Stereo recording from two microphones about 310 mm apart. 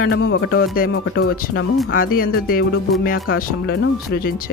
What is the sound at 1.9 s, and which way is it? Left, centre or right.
Speech, left.